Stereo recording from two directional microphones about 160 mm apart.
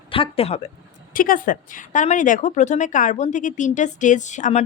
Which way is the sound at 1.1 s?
60° left (ahead or behind).